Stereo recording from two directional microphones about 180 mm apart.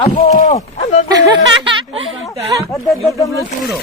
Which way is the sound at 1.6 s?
30° right (ahead or behind).